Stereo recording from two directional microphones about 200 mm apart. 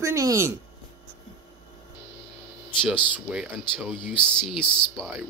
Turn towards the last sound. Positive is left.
turn(degrees=0)  # may be behind; listen again after turning